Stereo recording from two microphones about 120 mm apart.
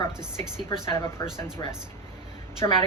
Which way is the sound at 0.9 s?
25° left (ahead or behind).